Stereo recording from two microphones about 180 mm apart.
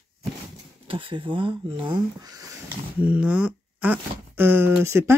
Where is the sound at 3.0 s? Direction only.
5° right (ahead or behind).